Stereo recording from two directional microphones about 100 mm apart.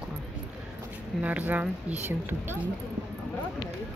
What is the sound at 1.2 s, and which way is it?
Speech, 15° right (ahead or behind).